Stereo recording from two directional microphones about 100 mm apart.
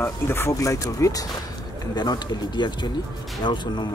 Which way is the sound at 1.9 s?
45° left (ahead or behind).